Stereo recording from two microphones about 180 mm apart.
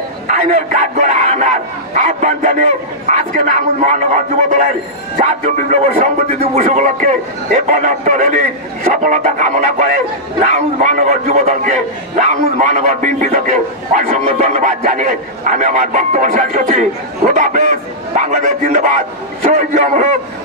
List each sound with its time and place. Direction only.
0.3 s a man's voice: 40° right (ahead or behind)